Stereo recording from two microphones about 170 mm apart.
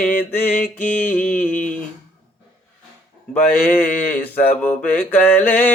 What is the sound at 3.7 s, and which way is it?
Mantra, 10° left (ahead or behind).